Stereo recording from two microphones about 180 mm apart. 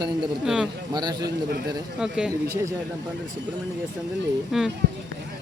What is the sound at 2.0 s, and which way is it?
Speech, 5° right (ahead or behind).